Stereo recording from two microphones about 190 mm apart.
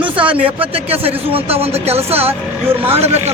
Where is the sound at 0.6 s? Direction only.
30° right (ahead or behind).